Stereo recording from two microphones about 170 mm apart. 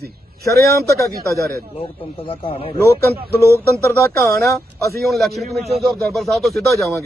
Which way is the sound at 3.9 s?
15° left (ahead or behind).